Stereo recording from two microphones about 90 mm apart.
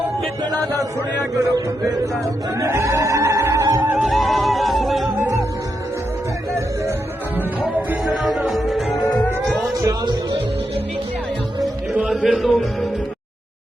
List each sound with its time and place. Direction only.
2.6 s music: 30° right (ahead or behind)
3.9 s music: centre (ahead or behind)
8.0 s music: centre (ahead or behind)
9.0 s music: 15° left (ahead or behind)
9.8 s music: 55° right (ahead or behind)
11.9 s music: 10° right (ahead or behind)